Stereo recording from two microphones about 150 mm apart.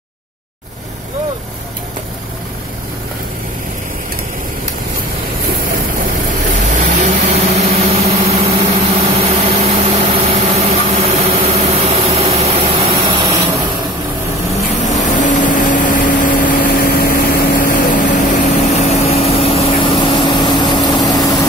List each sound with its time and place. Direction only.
6.6 s vehicle: 55° right (ahead or behind)
14.7 s vehicle: 50° left (ahead or behind); by 21.4 s 25° left (ahead or behind)